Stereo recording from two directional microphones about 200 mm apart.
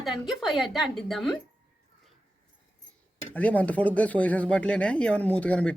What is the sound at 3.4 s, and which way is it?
Speech, 5° left (ahead or behind).